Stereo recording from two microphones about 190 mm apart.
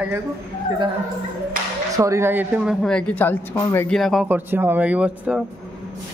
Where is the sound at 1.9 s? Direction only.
15° right (ahead or behind).